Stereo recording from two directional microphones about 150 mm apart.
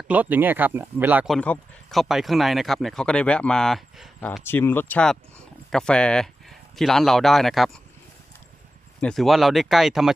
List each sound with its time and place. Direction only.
0.1 s speech: 10° right (ahead or behind)
1.2 s speech: 5° left (ahead or behind)
4.4 s speech: 15° left (ahead or behind)
9.0 s speech: 5° left (ahead or behind)